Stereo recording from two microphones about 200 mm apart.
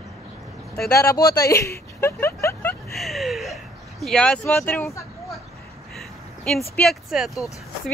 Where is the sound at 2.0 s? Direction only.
15° left (ahead or behind).